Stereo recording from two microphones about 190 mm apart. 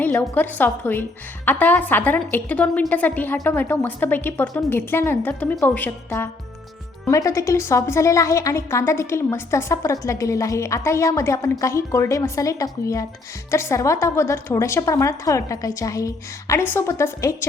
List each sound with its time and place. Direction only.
0.0 s a woman's voice: 10° left (ahead or behind)